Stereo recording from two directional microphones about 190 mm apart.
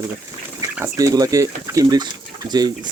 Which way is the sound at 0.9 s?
20° right (ahead or behind).